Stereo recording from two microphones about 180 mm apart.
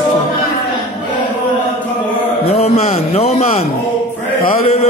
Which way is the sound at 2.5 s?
35° left (ahead or behind).